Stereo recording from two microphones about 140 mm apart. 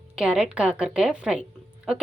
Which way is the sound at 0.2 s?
5° right (ahead or behind).